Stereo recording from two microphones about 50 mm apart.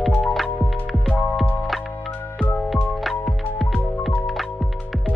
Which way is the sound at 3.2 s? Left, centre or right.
Centre.